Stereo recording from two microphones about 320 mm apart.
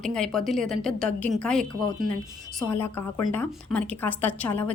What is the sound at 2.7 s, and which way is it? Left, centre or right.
A woman's voice, centre.